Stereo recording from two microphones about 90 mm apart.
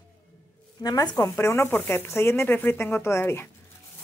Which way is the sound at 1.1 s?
30° left (ahead or behind).